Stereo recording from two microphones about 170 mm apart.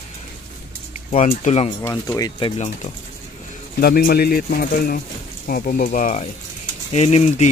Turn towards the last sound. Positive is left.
turn(degrees=40)  # may be behind; listen again after turning